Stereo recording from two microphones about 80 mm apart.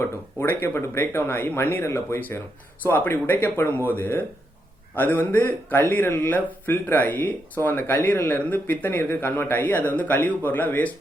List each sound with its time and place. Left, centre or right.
0.0 s speech: left